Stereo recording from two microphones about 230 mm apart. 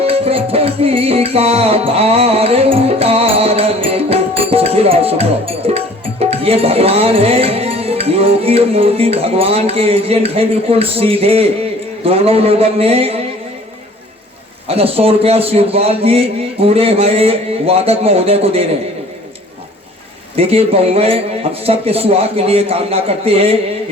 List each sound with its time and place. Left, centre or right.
0.0 s music: right
12.0 s a man's voice: right
14.7 s a man's voice: right
20.3 s a man's voice: right